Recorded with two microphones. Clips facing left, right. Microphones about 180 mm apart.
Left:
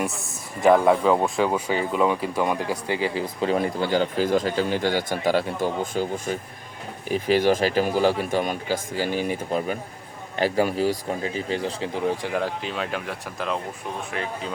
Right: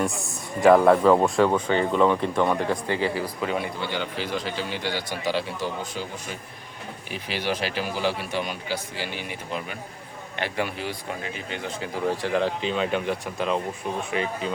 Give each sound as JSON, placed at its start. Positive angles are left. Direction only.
{"t": 0.6, "sound": "speech", "side_deg": 0}
{"t": 3.4, "sound": "speech", "side_deg": 40}
{"t": 12.0, "sound": "speech", "side_deg": 15}